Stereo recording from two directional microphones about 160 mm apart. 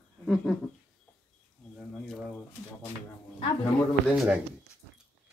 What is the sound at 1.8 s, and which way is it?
Speech, centre (ahead or behind).